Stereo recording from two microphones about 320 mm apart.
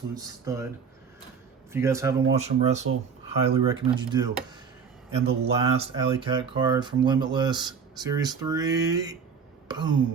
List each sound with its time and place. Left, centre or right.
0.1 s speech: centre
1.7 s speech: centre
2.3 s speech: right
9.6 s a sound: centre